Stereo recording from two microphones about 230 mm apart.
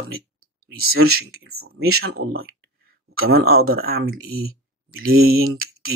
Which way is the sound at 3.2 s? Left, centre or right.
Right.